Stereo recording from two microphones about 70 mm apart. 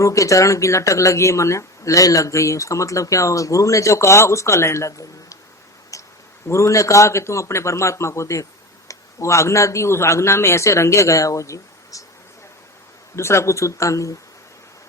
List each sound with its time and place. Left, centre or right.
0.0 s speech: left
5.9 s a sound: left
6.5 s speech: left
13.1 s speech: left